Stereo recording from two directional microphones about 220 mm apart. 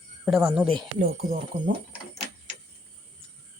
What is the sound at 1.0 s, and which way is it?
Speech, 40° right (ahead or behind).